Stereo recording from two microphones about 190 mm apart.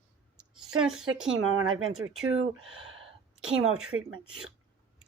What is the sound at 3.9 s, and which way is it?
Speech, 90° right.